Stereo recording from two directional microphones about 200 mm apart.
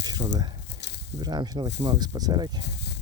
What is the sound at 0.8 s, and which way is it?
Snake, 55° left (ahead or behind).